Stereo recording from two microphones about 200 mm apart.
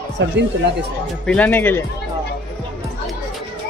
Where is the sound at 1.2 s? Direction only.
5° left (ahead or behind).